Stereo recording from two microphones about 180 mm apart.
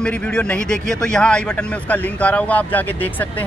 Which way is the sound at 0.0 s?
5° left (ahead or behind).